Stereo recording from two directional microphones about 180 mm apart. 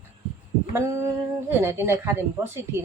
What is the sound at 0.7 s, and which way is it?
A woman's voice, 15° right (ahead or behind).